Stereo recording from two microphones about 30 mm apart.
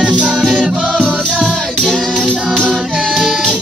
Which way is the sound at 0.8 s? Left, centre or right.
Right.